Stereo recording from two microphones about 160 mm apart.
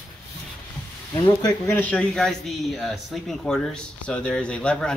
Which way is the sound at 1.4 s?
25° left (ahead or behind).